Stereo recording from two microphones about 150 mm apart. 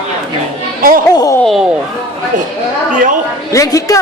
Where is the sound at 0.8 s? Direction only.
70° right (ahead or behind).